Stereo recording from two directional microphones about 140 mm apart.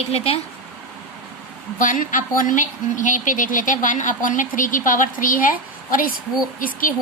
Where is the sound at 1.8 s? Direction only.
70° left (ahead or behind).